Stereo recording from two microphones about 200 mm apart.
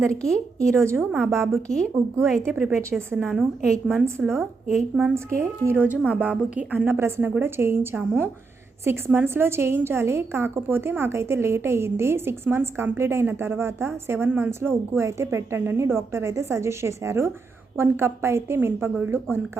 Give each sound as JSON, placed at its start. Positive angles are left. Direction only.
{"t": 0.1, "sound": "a woman's voice", "side_deg": 5}
{"t": 4.0, "sound": "a woman's voice", "side_deg": -10}